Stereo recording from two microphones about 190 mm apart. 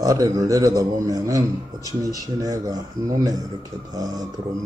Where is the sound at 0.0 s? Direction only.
20° right (ahead or behind).